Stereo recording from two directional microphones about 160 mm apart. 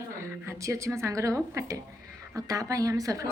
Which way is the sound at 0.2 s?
20° right (ahead or behind).